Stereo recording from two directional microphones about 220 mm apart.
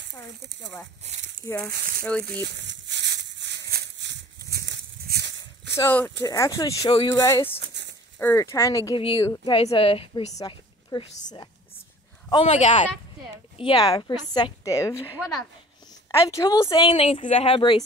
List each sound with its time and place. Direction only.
1.4 s speech: 10° left (ahead or behind)
1.7 s speech: 40° right (ahead or behind)
2.6 s a sound: 55° right (ahead or behind)
5.8 s speech: 10° left (ahead or behind)
7.6 s a sound: 50° right (ahead or behind)
8.2 s a woman's voice: 10° left (ahead or behind)
16.2 s speech: 15° left (ahead or behind)